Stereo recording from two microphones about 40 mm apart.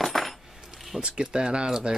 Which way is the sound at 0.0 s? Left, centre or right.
Centre.